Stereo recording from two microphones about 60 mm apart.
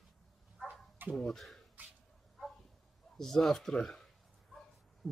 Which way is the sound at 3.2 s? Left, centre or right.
Centre.